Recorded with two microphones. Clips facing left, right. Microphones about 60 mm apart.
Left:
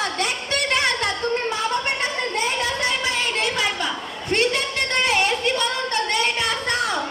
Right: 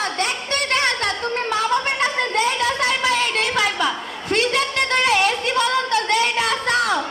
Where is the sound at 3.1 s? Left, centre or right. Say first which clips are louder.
Right 3 dB; right.